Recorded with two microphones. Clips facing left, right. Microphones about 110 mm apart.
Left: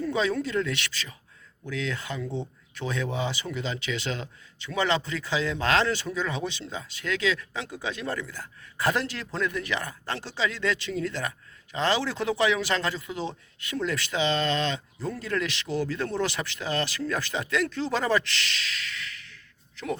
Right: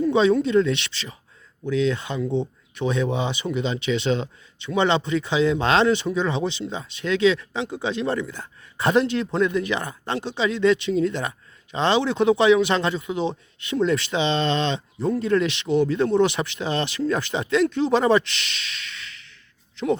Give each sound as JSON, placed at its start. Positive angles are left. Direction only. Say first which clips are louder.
{"t": 0.0, "sound": "speech", "louder": "right 8 dB", "side_deg": -25}